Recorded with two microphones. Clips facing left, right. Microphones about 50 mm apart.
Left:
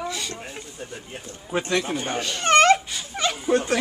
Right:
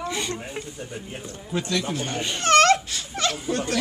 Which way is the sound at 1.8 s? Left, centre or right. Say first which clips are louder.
Left 1 dB; centre.